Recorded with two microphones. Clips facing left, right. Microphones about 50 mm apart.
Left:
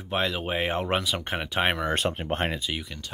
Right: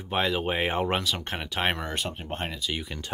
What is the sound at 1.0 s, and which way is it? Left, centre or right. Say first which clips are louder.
Speech: left 2 dB; centre.